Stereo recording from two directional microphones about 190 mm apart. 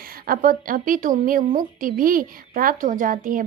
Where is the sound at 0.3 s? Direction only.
45° right (ahead or behind).